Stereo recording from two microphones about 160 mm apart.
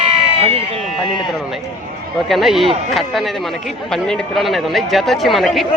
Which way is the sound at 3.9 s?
Centre (ahead or behind).